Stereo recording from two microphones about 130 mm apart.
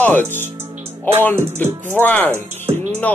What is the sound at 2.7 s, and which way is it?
Music, 50° right (ahead or behind).